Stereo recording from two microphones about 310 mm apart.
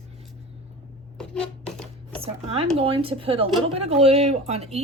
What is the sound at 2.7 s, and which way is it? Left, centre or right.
Speech, centre.